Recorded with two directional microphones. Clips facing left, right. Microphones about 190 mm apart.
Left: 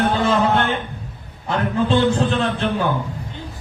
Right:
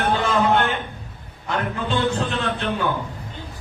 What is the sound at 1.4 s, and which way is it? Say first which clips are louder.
Speech: left 5 dB; 35° left (ahead or behind).